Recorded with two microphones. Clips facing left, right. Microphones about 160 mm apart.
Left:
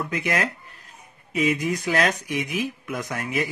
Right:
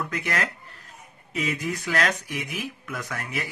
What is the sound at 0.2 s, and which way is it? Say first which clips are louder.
Speech: left 3 dB; 15° left (ahead or behind).